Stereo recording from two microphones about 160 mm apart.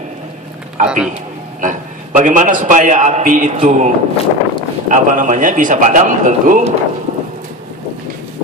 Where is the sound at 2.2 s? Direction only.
55° right (ahead or behind).